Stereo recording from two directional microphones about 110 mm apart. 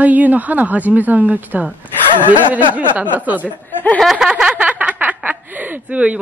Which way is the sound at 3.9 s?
5° right (ahead or behind).